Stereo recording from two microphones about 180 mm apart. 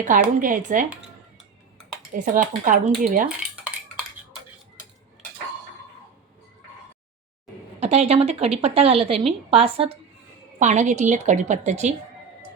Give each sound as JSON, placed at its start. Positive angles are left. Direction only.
{"t": 0.3, "sound": "speech", "side_deg": -45}
{"t": 2.1, "sound": "speech", "side_deg": -45}
{"t": 3.2, "sound": "cutlery", "side_deg": -5}
{"t": 7.8, "sound": "speech", "side_deg": -35}